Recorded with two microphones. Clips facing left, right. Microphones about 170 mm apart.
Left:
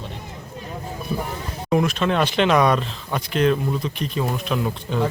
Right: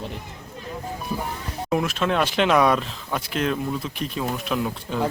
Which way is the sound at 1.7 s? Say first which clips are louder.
Left 3 dB; 5° right (ahead or behind).